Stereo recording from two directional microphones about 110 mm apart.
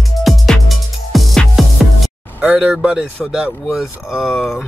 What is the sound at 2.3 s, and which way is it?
A man's voice, 10° right (ahead or behind).